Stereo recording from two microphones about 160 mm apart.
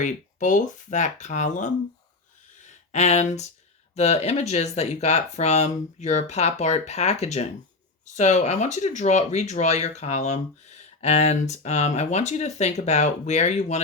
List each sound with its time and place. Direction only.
0.0 s speech: 50° left (ahead or behind)
2.9 s speech: 45° left (ahead or behind)